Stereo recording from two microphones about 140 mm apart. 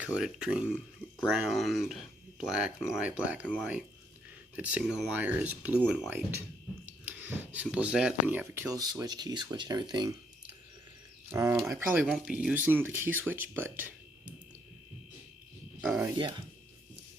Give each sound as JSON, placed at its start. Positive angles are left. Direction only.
{"t": 0.0, "sound": "speech", "side_deg": -5}
{"t": 11.3, "sound": "speech", "side_deg": -20}
{"t": 12.1, "sound": "speech", "side_deg": -5}